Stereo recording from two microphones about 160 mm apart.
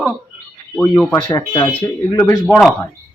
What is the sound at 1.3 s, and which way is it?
Speech, 30° left (ahead or behind).